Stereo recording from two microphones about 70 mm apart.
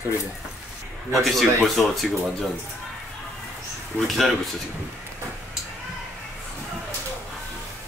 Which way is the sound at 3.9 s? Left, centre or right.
Left.